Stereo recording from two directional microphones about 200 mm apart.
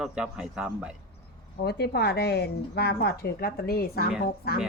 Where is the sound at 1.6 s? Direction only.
55° left (ahead or behind).